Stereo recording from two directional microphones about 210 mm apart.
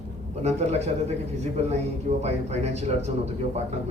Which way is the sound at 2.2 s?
30° right (ahead or behind).